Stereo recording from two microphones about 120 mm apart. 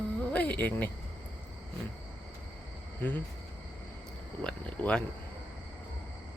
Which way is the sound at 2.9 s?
15° left (ahead or behind).